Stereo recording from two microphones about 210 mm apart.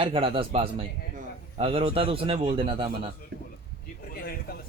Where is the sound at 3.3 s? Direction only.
55° right (ahead or behind).